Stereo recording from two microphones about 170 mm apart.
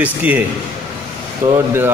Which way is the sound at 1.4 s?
15° right (ahead or behind).